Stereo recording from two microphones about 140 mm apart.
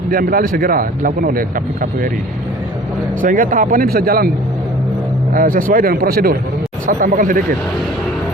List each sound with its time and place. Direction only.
0.1 s speech: 90° right
3.2 s speech: 70° right (ahead or behind); by 4.3 s 90° right
5.3 s speech: 85° right
6.8 s speech: 80° right